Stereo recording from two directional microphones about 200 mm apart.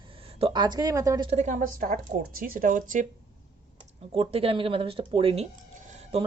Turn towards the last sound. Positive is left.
turn(degrees=-30)  # may be behind; listen again after turning